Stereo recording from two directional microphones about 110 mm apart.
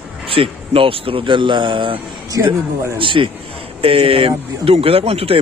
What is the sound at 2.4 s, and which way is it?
Speech, 25° right (ahead or behind).